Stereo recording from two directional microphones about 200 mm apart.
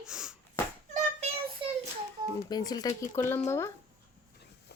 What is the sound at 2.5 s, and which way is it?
A woman's voice, 20° left (ahead or behind).